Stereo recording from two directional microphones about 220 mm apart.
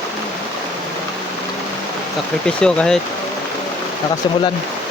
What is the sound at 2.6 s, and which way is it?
Speech, 5° left (ahead or behind).